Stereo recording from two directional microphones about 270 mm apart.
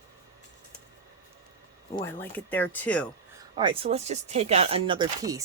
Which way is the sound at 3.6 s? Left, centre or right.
Centre.